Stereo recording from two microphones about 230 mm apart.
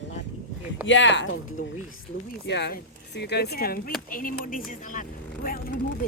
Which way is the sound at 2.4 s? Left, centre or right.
Left.